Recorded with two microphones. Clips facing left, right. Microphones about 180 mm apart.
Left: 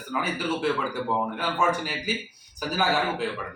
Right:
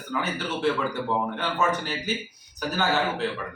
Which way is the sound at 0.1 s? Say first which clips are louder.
Left 1 dB; 10° left (ahead or behind).